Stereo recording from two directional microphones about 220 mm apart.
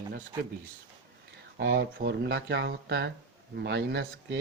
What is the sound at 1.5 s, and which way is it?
Speech, 50° right (ahead or behind).